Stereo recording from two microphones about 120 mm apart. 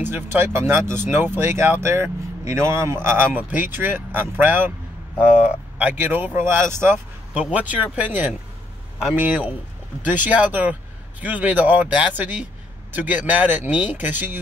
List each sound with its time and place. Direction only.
0.0 s speech: 15° right (ahead or behind)
5.8 s speech: 15° right (ahead or behind)